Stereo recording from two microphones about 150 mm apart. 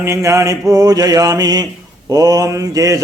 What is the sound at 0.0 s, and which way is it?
Mantra, 20° right (ahead or behind).